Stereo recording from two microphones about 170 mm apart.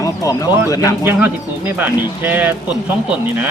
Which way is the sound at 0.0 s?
20° left (ahead or behind).